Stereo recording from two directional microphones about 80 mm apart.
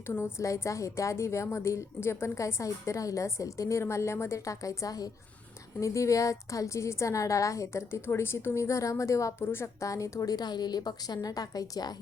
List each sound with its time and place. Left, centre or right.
0.1 s a woman's voice: left
5.8 s a woman's voice: left
9.4 s a woman's voice: left
9.8 s a woman's voice: left